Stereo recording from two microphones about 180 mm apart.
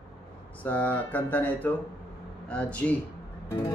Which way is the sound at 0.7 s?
10° left (ahead or behind).